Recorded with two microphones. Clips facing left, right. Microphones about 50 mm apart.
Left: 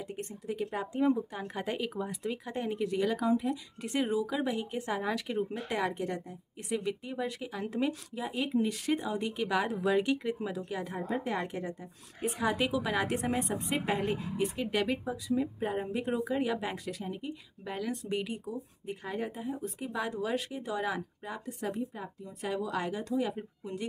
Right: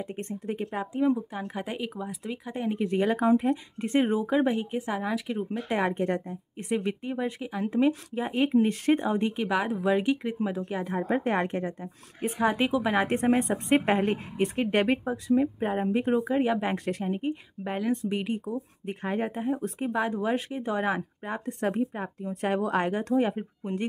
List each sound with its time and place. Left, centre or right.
0.0 s speech: right
0.7 s speech: centre
2.8 s speech: right
4.7 s speech: centre
5.7 s speech: right
8.1 s speech: right
9.6 s speech: centre; by 11.1 s right
11.1 s speech: right
16.8 s speech: right
17.7 s speech: right
18.4 s speech: right
19.9 s speech: right